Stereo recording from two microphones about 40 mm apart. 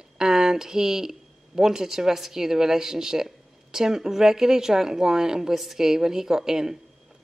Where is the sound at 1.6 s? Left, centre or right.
Centre.